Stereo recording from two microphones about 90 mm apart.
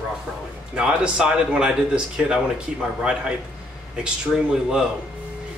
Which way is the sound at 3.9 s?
10° right (ahead or behind).